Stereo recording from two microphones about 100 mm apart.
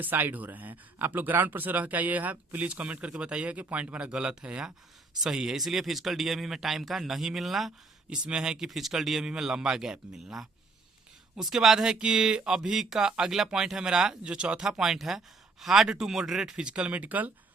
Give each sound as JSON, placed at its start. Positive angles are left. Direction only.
{"t": 0.0, "sound": "speech", "side_deg": -20}